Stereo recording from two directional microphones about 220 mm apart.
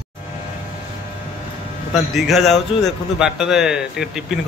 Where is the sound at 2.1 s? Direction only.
Centre (ahead or behind).